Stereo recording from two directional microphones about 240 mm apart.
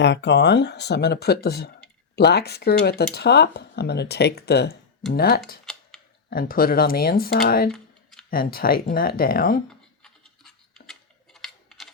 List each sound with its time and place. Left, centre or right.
0.0 s speech: left
5.7 s a sound: centre
6.3 s speech: left
10.0 s scratch: centre
11.3 s typing: centre